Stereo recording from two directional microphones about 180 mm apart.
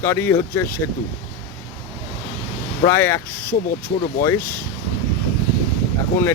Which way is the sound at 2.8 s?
15° left (ahead or behind).